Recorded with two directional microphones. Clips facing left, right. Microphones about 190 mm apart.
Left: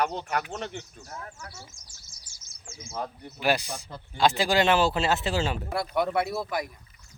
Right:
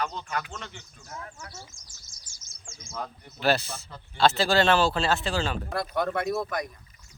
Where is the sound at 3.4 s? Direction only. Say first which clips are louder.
Right 1 dB; 15° left (ahead or behind).